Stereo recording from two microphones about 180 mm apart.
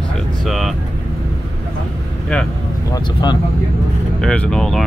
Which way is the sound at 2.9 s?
25° left (ahead or behind).